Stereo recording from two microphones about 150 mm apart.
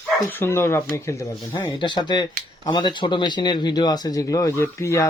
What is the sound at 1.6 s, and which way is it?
A man's voice, 30° left (ahead or behind).